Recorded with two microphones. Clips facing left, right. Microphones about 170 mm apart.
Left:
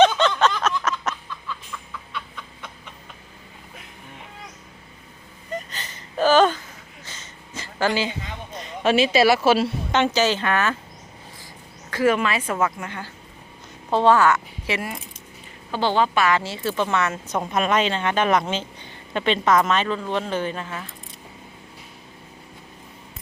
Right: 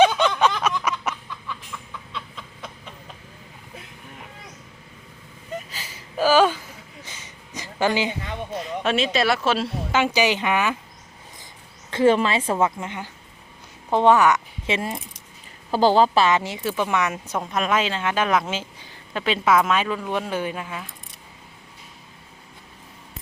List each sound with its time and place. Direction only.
0.0 s a sound: 10° right (ahead or behind)
5.5 s a sound: 5° right (ahead or behind)
8.5 s speech: centre (ahead or behind)
9.9 s speech: 10° right (ahead or behind)
11.9 s a woman's voice: 25° right (ahead or behind)
15.7 s a woman's voice: 40° right (ahead or behind)
16.2 s speech: 20° right (ahead or behind)
17.4 s speech: centre (ahead or behind)